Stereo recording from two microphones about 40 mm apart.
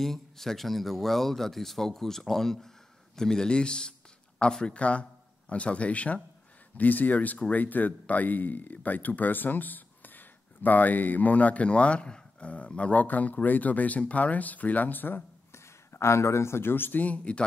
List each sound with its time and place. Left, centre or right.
0.0 s speech: centre; by 6.1 s left
6.8 s speech: left
15.9 s a sound: left
16.5 s speech: left
17.0 s speech: left